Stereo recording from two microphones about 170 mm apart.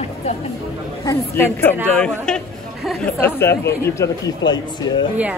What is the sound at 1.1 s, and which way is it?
Speech, 15° left (ahead or behind).